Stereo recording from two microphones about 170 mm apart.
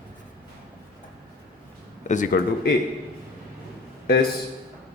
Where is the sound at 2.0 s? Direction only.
50° left (ahead or behind).